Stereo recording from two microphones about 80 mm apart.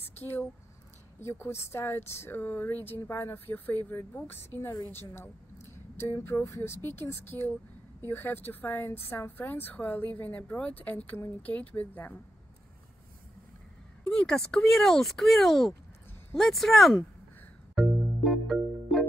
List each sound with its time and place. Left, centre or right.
0.2 s speech: left
14.1 s speech: centre
17.7 s music: centre